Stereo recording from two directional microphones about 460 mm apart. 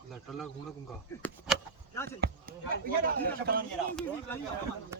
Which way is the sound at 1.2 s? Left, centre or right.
Centre.